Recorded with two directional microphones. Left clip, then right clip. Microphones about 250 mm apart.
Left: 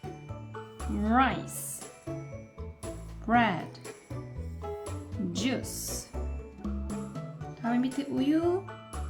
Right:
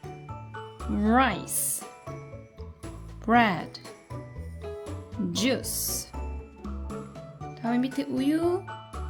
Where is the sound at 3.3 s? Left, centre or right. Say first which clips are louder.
Right 4 dB; right.